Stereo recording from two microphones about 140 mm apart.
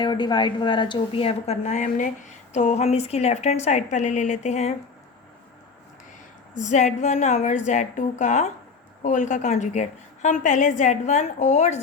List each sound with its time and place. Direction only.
0.0 s a woman's voice: 30° left (ahead or behind); by 4.7 s 55° left (ahead or behind)
6.6 s a woman's voice: 60° left (ahead or behind)